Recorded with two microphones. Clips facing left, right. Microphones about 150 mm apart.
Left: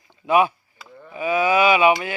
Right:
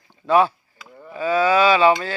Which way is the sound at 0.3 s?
15° left (ahead or behind).